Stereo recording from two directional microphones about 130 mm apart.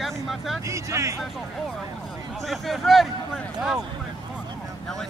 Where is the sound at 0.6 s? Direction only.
25° right (ahead or behind).